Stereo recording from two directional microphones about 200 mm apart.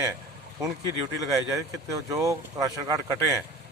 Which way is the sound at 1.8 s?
15° right (ahead or behind).